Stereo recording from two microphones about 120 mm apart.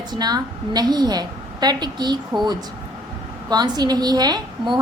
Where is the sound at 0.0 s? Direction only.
35° right (ahead or behind).